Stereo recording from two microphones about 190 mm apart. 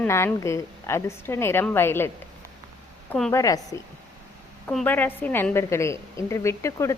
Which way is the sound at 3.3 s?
20° left (ahead or behind).